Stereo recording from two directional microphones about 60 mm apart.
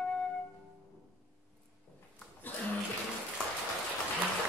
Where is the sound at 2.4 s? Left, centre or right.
Left.